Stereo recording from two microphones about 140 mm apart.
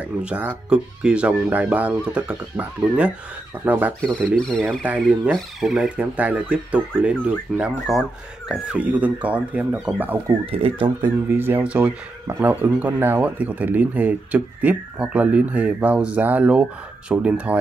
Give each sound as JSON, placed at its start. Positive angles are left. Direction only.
{"t": 0.0, "sound": "speech", "side_deg": -10}
{"t": 4.4, "sound": "speech", "side_deg": 5}
{"t": 4.8, "sound": "speech", "side_deg": -10}
{"t": 10.4, "sound": "speech", "side_deg": -40}
{"t": 11.2, "sound": "speech", "side_deg": -15}